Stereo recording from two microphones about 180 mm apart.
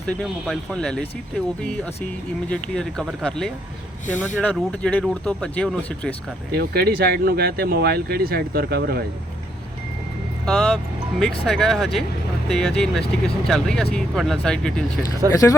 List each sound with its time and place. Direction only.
0.1 s speech: centre (ahead or behind)
2.5 s speech: 5° left (ahead or behind)
4.0 s speech: 45° left (ahead or behind)
4.4 s speech: 5° left (ahead or behind)
6.5 s speech: 60° right (ahead or behind)
10.4 s speech: 5° left (ahead or behind)
15.3 s speech: 20° left (ahead or behind)